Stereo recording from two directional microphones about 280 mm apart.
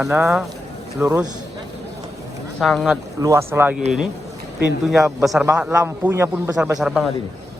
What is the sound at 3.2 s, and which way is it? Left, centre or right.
Speech, centre.